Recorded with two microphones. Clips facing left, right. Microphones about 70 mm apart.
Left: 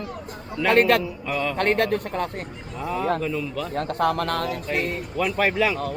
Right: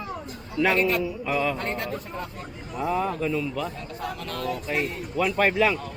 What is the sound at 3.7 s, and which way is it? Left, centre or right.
Speech, left.